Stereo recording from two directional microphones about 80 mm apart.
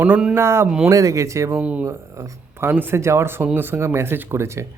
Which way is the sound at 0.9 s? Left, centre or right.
Right.